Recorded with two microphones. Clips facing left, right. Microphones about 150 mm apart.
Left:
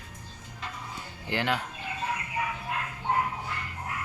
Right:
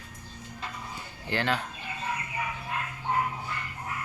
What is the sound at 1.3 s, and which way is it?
Speech, 15° left (ahead or behind).